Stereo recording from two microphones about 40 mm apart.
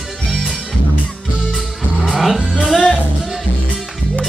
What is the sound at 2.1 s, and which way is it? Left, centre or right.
Music, centre.